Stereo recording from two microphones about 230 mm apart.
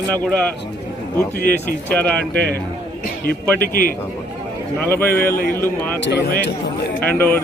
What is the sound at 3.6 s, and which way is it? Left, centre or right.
Speech, left.